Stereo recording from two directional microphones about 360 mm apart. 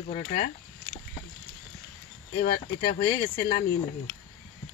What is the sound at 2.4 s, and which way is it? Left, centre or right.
Speech, centre.